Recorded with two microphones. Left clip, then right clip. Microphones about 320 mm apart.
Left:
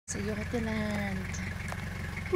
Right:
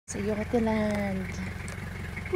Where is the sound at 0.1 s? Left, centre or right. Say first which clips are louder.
Right 6 dB; centre.